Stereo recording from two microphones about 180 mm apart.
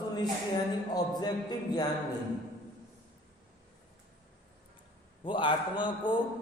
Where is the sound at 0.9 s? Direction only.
20° left (ahead or behind).